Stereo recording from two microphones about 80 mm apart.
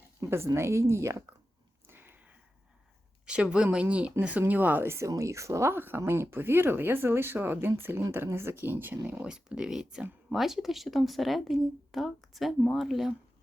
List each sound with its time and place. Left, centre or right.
0.3 s speech: right
1.9 s a sound: right
3.2 s speech: centre
9.2 s speech: centre